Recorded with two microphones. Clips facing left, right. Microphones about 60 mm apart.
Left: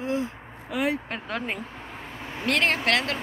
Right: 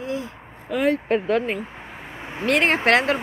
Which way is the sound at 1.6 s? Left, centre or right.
Centre.